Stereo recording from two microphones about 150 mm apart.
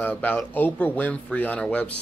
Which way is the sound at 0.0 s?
10° left (ahead or behind).